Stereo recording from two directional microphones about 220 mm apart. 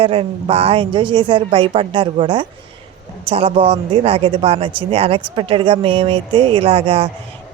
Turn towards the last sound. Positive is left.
turn(degrees=-25)  # may be behind; listen again after turning